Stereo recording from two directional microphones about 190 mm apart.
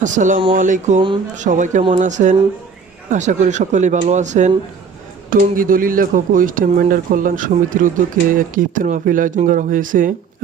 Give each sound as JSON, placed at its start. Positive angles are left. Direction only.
{"t": 0.0, "sound": "speech", "side_deg": -40}